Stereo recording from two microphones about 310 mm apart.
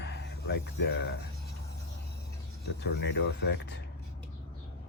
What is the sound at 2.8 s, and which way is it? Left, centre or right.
Speech, left.